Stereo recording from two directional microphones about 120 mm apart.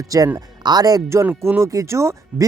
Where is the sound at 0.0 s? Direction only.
30° right (ahead or behind).